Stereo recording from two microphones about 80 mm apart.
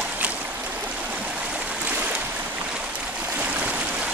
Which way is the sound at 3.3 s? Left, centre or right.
Centre.